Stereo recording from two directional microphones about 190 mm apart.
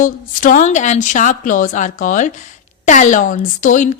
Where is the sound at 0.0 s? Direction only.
45° left (ahead or behind).